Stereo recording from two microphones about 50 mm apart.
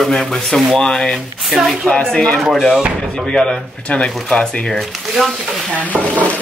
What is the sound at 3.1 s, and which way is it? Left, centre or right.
A woman's voice, centre.